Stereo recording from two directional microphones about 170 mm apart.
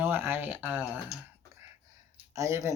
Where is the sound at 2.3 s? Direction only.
15° right (ahead or behind).